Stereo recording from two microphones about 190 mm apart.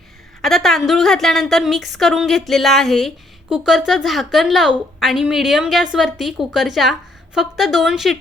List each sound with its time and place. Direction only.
0.4 s a woman's voice: centre (ahead or behind)